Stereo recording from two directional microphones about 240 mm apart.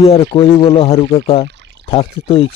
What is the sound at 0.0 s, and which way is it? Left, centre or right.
Speech, left.